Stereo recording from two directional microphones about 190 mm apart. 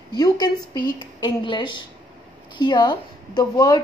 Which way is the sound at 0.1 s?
20° left (ahead or behind).